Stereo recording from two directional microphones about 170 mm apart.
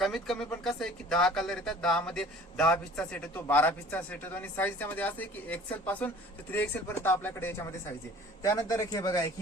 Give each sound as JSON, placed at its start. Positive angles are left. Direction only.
{"t": 0.0, "sound": "speech", "side_deg": 0}